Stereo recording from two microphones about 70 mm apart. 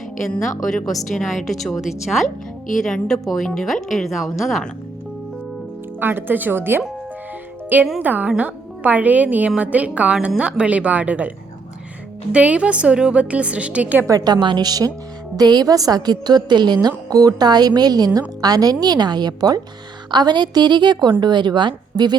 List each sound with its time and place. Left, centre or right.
0.4 s speech: centre
6.0 s a woman's voice: right
12.3 s a woman's voice: centre
14.1 s a woman's voice: right
17.1 s a woman's voice: right
20.1 s a woman's voice: right